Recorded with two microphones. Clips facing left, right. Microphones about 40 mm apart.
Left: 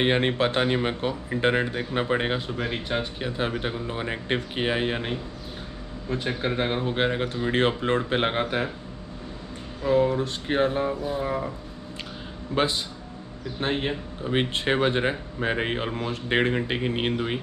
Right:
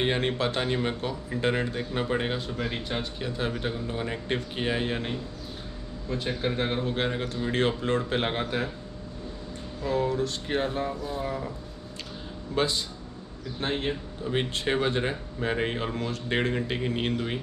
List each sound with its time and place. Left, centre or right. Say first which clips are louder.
0.0 s speech: left 4 dB; left
9.8 s speech: left 5 dB; left
12.5 s speech: left 2 dB; left